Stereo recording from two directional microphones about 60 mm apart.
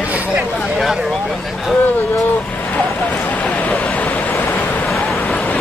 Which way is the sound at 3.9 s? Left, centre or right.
Left.